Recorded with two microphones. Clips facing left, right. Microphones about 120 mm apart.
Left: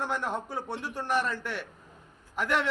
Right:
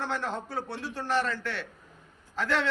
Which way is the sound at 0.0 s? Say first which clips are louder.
Left 1 dB; 15° left (ahead or behind).